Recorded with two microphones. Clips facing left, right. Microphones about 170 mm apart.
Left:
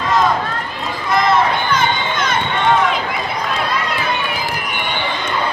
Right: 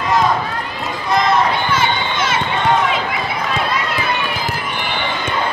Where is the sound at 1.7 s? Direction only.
5° right (ahead or behind).